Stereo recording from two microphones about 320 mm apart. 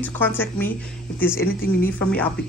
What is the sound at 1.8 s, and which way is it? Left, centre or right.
Speech, centre.